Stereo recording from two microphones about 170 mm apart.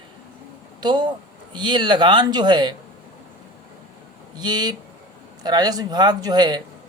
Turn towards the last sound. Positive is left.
turn(degrees=-25)  # may be behind; listen again after turning